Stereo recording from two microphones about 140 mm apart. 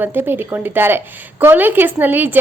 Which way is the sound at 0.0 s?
15° right (ahead or behind).